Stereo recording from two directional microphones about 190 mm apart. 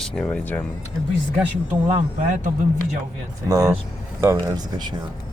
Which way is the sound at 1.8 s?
35° right (ahead or behind).